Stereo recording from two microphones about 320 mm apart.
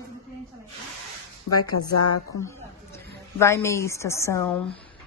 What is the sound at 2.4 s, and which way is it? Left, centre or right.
A woman's voice, centre.